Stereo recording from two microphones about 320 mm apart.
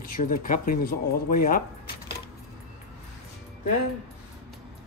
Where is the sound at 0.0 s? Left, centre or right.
Left.